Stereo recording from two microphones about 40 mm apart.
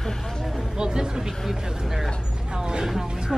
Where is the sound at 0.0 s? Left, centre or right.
Centre.